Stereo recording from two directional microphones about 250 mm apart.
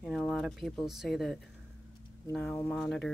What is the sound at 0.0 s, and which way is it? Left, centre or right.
Speech, centre.